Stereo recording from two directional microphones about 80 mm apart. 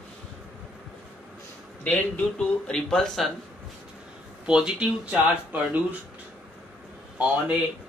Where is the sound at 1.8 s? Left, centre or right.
Centre.